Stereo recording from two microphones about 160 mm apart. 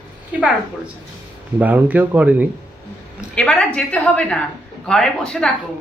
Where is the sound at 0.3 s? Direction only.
10° right (ahead or behind).